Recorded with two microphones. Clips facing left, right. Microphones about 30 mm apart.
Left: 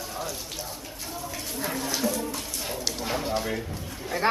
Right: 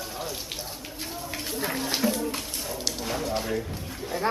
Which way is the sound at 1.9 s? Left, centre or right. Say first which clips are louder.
Right 2 dB; right.